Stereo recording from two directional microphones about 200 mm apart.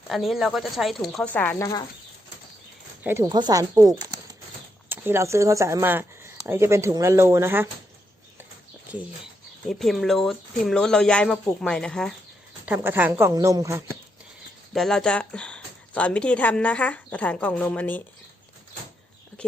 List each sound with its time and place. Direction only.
0.1 s speech: centre (ahead or behind)
3.0 s speech: 15° right (ahead or behind)
9.6 s speech: centre (ahead or behind)
12.6 s speech: 10° right (ahead or behind)
14.7 s speech: centre (ahead or behind)
19.4 s speech: 5° left (ahead or behind)